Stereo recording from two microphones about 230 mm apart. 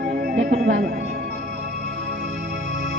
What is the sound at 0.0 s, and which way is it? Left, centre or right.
Speech, right.